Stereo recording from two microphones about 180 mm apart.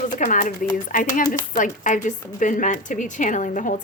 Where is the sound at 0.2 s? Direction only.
45° left (ahead or behind).